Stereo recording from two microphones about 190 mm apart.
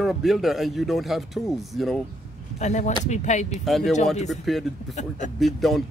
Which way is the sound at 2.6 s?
40° left (ahead or behind).